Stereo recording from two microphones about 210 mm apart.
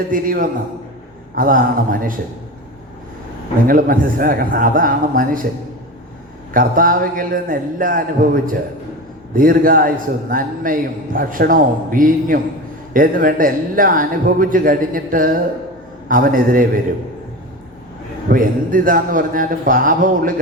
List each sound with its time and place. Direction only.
0.1 s a man's voice: 40° right (ahead or behind)
3.7 s a man's voice: 40° right (ahead or behind)
6.5 s a man's voice: 40° right (ahead or behind)
18.3 s a man's voice: 40° right (ahead or behind)